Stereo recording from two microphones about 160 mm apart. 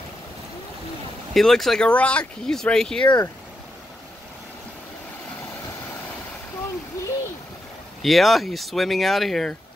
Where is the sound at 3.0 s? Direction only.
25° left (ahead or behind).